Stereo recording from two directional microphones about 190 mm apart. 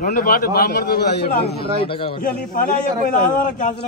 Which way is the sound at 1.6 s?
30° left (ahead or behind).